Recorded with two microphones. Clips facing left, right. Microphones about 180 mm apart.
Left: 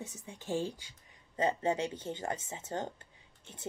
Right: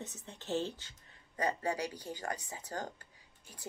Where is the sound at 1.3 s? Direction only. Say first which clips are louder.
Left 4 dB; 25° left (ahead or behind).